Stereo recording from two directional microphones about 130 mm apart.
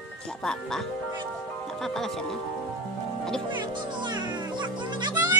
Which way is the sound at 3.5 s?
35° right (ahead or behind).